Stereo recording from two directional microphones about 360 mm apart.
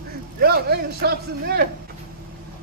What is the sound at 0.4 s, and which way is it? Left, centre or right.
A man's voice, right.